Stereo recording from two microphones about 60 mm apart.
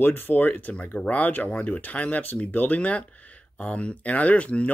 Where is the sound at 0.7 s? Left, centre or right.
Left.